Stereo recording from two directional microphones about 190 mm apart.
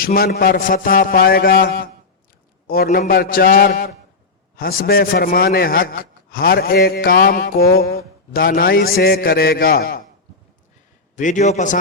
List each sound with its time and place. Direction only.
0.0 s a man's voice: 50° left (ahead or behind)
11.2 s a man's voice: 40° left (ahead or behind)